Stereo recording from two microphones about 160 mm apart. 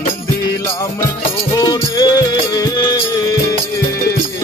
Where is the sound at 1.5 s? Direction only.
20° left (ahead or behind).